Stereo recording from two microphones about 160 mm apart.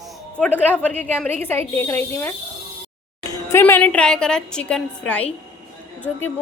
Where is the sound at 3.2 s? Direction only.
20° left (ahead or behind).